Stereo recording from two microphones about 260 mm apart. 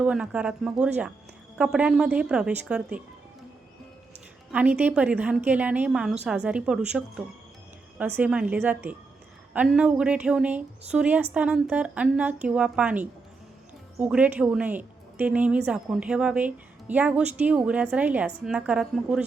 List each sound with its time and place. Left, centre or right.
0.0 s speech: centre
4.5 s speech: centre